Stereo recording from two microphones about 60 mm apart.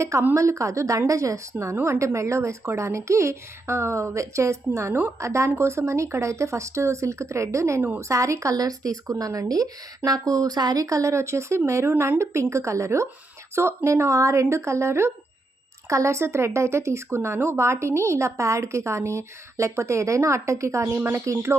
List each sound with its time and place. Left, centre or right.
0.0 s a woman's voice: right
1.5 s a woman's voice: right
7.8 s a woman's voice: right
8.0 s a woman's voice: right